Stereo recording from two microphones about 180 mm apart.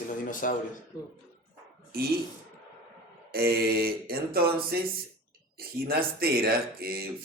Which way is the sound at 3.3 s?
60° right (ahead or behind).